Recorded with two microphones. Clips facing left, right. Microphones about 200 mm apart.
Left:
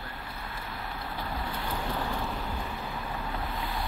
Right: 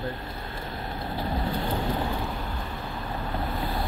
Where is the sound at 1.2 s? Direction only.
25° right (ahead or behind).